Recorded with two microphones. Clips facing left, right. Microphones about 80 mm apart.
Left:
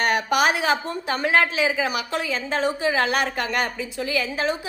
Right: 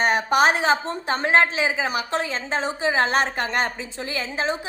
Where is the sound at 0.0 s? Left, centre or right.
Right.